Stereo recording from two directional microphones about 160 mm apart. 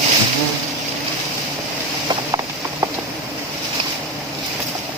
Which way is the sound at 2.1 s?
25° right (ahead or behind).